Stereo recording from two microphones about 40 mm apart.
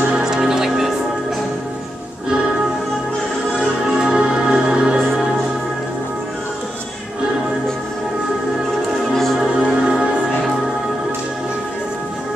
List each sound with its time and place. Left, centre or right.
0.1 s music: centre
3.9 s music: centre
9.1 s music: centre
9.6 s music: right